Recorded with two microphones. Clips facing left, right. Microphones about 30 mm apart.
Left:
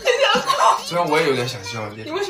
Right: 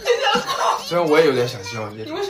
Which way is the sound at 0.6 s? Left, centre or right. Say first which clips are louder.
Left 4 dB; centre.